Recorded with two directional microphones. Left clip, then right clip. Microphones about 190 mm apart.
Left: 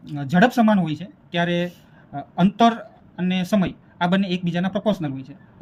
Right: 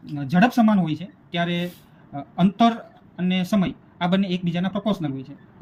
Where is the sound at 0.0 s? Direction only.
40° left (ahead or behind).